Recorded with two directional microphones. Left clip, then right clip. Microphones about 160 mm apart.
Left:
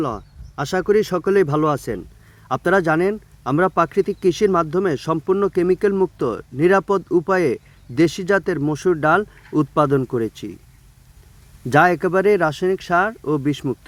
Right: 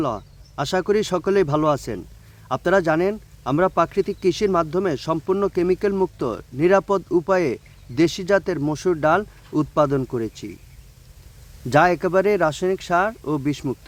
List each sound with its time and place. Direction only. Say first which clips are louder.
0.0 s speech: even; 15° left (ahead or behind)
11.7 s speech: left 2 dB; 15° left (ahead or behind)